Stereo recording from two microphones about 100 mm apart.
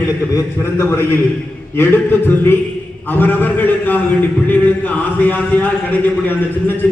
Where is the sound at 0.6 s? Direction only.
25° left (ahead or behind).